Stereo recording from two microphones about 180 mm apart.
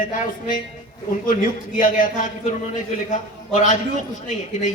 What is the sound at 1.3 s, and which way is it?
A man's voice, 50° left (ahead or behind).